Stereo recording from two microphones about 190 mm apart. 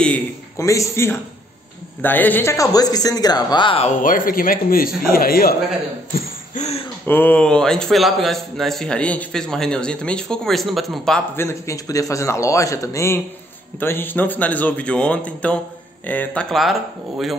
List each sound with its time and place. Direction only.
0.6 s a man's voice: 15° left (ahead or behind)
4.0 s speech: 45° left (ahead or behind)
6.1 s a sound: 40° left (ahead or behind)
7.1 s a man's voice: 10° left (ahead or behind)